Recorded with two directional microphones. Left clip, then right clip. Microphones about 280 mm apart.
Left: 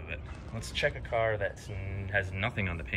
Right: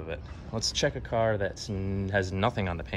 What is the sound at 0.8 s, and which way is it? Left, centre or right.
Speech, right.